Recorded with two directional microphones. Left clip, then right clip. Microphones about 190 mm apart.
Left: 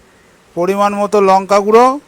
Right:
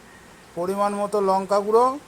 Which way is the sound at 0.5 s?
55° left (ahead or behind).